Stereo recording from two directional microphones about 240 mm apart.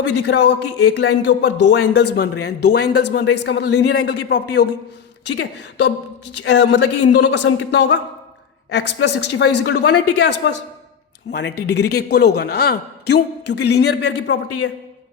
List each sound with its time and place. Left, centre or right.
0.3 s a man's voice: left